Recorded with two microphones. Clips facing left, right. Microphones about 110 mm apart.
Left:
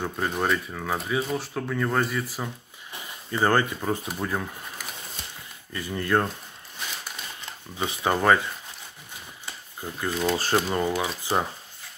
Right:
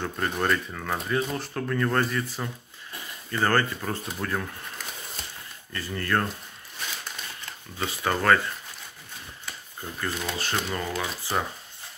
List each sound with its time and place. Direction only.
0.0 s speech: 10° left (ahead or behind)
7.7 s speech: 15° left (ahead or behind)
9.5 s a sound: 15° left (ahead or behind)
10.3 s speech: 35° left (ahead or behind)
10.7 s speech: 20° left (ahead or behind)